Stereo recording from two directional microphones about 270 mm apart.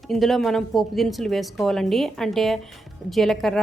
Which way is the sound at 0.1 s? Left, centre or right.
Centre.